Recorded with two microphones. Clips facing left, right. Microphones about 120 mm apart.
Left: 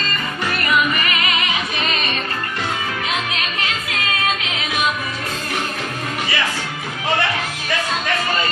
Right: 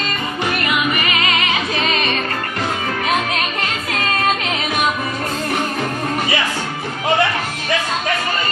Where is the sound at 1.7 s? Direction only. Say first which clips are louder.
Right 4 dB; 40° right (ahead or behind).